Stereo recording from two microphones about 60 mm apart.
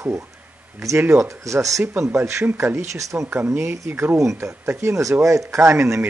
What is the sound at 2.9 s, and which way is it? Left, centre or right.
Speech, right.